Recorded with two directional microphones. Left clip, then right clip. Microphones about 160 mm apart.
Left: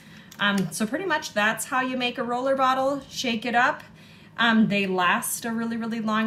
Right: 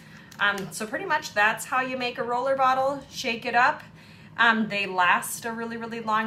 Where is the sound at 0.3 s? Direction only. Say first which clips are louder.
Even; 25° right (ahead or behind).